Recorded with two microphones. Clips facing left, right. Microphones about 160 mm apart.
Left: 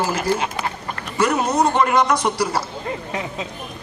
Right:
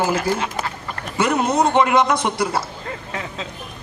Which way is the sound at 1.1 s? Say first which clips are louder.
Even; 25° right (ahead or behind).